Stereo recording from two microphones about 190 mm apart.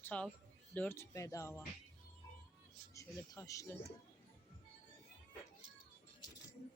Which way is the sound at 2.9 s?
15° left (ahead or behind).